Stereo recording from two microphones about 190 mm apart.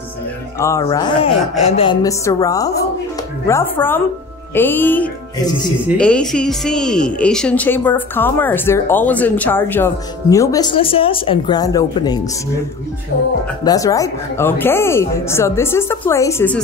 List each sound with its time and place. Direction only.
0.6 s music: 15° left (ahead or behind)
1.6 s a woman's voice: 30° left (ahead or behind)
2.0 s speech: 15° left (ahead or behind)
13.1 s speech: 65° left (ahead or behind)
13.7 s speech: 20° left (ahead or behind)